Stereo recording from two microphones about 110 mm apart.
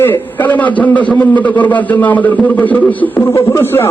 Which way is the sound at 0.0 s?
15° left (ahead or behind).